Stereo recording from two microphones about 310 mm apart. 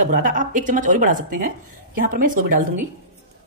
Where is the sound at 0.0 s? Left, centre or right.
Right.